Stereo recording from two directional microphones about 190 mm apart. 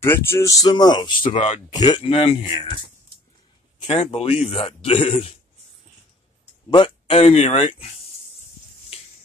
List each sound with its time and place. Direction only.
0.0 s speech: 15° left (ahead or behind)
1.2 s a man's voice: 40° left (ahead or behind)
1.7 s a man's voice: 20° left (ahead or behind)
3.8 s a man's voice: 35° left (ahead or behind)
6.7 s a man's voice: 30° left (ahead or behind)